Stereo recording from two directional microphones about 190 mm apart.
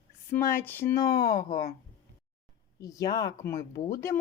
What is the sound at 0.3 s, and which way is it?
Speech, 10° left (ahead or behind).